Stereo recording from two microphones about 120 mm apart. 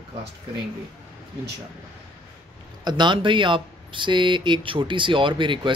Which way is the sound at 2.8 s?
35° right (ahead or behind).